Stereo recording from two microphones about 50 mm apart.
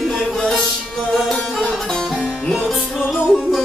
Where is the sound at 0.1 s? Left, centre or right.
Centre.